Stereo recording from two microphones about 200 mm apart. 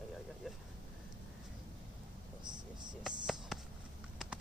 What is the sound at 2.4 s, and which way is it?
Speech, 20° right (ahead or behind).